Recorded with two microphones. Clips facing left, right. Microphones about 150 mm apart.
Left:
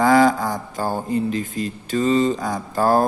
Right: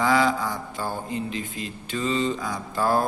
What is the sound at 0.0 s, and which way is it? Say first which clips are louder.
Speech: left 6 dB; 45° left (ahead or behind).